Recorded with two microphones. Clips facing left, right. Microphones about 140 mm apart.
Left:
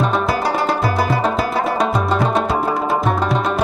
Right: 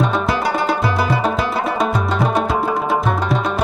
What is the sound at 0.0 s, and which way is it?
Music, centre (ahead or behind).